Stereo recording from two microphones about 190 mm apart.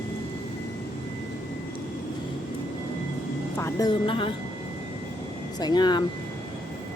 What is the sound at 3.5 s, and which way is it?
Speech, 15° left (ahead or behind).